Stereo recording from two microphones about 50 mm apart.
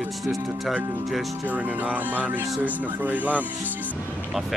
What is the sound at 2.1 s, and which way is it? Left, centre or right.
Speech, right.